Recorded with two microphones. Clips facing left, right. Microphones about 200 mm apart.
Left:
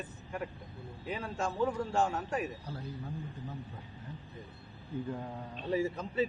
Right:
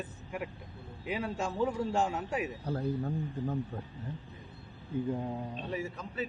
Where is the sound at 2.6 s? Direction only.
50° right (ahead or behind).